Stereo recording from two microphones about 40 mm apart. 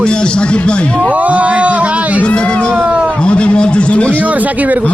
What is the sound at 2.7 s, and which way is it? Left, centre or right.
Speech, right.